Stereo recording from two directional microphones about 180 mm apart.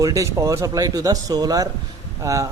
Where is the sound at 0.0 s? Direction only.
15° right (ahead or behind).